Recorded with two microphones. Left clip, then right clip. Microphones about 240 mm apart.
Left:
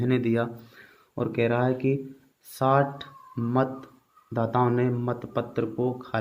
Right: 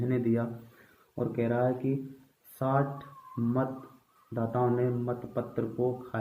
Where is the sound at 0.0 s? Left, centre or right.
Left.